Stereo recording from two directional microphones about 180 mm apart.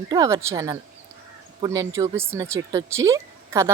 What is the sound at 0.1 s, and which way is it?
A woman's voice, 15° right (ahead or behind).